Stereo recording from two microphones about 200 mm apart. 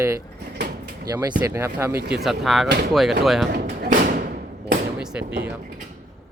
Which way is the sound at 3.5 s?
50° right (ahead or behind).